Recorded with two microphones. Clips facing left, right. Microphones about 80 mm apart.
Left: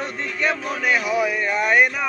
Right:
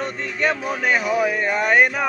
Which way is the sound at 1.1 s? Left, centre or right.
Right.